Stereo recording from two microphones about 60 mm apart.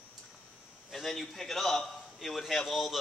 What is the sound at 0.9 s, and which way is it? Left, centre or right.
Speech, centre.